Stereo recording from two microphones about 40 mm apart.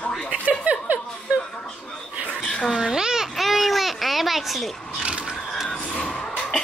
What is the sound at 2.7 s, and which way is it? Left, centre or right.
Speech, centre.